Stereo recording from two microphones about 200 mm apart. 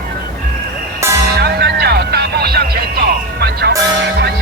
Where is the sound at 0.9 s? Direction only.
15° right (ahead or behind).